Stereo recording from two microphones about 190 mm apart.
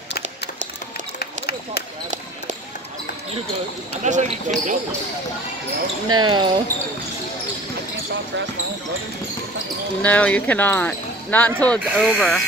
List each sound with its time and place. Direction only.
1.2 s a sound: 55° left (ahead or behind)
4.0 s speech: 40° right (ahead or behind)
6.0 s speech: 25° right (ahead or behind)
10.0 s speech: 5° left (ahead or behind)